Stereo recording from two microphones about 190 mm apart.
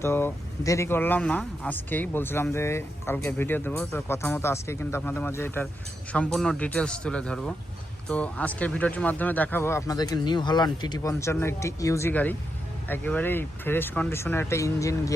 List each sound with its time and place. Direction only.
0.0 s speech: 10° left (ahead or behind)